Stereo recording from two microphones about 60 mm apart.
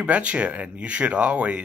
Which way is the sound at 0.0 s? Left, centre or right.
Right.